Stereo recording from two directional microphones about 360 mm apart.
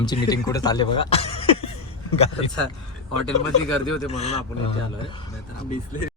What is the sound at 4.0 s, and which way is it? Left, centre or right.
Speech, centre.